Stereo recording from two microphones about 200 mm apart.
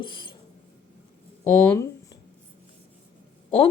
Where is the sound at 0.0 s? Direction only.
25° left (ahead or behind).